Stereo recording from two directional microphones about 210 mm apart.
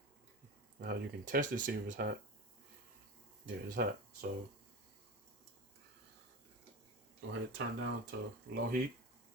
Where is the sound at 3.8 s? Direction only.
45° right (ahead or behind).